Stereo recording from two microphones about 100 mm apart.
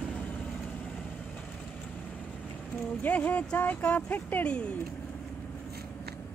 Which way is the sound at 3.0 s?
15° left (ahead or behind).